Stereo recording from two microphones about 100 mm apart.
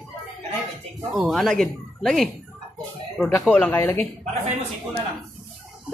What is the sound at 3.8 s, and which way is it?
Speech, 25° left (ahead or behind).